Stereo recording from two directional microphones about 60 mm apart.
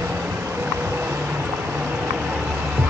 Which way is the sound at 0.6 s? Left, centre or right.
Right.